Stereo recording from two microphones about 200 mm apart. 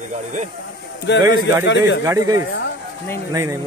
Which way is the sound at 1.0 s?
60° left (ahead or behind).